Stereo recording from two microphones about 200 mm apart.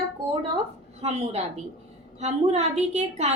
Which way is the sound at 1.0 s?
30° right (ahead or behind).